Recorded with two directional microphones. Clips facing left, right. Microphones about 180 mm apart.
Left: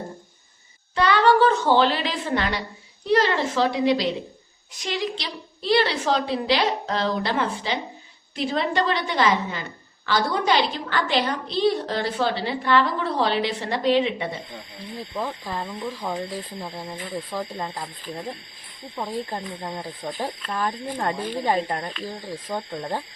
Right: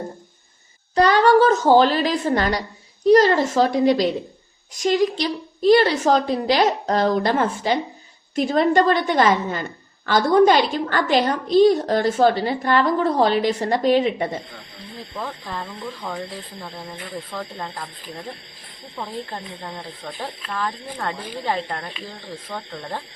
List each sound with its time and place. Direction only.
0.9 s a sound: 40° right (ahead or behind)
3.1 s a woman's voice: 45° right (ahead or behind)
15.1 s speech: 15° left (ahead or behind)
18.9 s speech: 15° left (ahead or behind)